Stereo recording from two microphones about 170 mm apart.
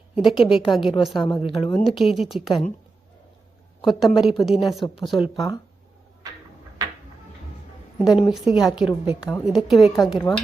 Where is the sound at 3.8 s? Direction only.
Centre (ahead or behind).